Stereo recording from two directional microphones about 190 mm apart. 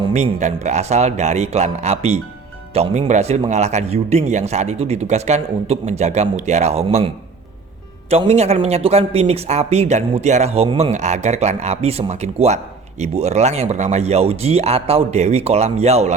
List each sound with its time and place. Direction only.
0.0 s speech: 35° right (ahead or behind)
8.1 s speech: 35° right (ahead or behind)